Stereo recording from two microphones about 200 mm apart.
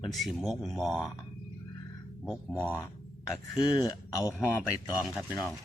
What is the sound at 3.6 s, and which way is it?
Speech, 20° left (ahead or behind).